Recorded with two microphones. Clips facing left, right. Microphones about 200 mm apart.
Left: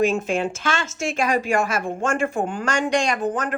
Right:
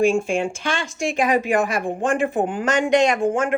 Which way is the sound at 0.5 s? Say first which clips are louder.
Even; 15° right (ahead or behind).